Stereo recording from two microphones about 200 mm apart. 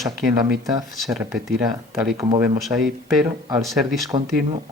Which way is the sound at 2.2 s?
20° right (ahead or behind).